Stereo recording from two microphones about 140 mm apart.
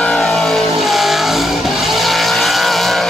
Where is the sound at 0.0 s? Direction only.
5° left (ahead or behind).